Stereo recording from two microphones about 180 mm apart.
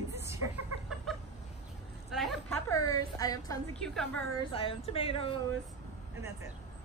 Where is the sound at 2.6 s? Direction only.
20° left (ahead or behind).